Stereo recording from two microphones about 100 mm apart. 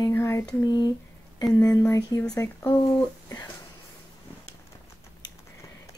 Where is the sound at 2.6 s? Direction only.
40° left (ahead or behind).